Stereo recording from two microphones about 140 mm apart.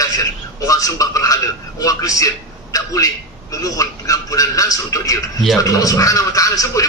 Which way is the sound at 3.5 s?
25° left (ahead or behind).